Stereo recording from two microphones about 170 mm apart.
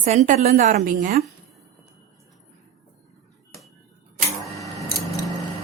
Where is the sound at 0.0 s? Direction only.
45° right (ahead or behind).